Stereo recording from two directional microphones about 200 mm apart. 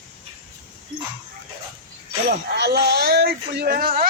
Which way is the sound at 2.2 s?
55° right (ahead or behind).